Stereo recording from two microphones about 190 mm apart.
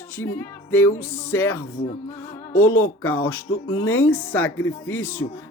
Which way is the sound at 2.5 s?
90° left.